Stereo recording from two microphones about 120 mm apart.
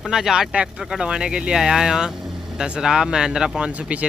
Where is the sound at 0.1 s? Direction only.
5° right (ahead or behind).